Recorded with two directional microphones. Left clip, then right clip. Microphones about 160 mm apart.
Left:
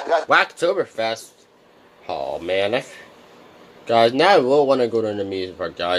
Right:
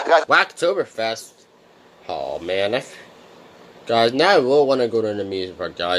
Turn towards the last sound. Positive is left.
turn(degrees=-10)  # may be behind; listen again after turning